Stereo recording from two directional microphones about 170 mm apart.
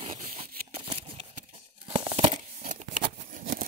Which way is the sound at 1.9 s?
35° right (ahead or behind).